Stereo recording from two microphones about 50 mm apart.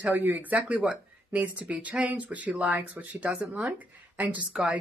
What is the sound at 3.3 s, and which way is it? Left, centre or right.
Speech, centre.